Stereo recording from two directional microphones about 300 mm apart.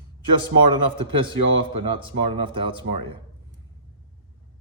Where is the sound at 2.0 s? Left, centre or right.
Centre.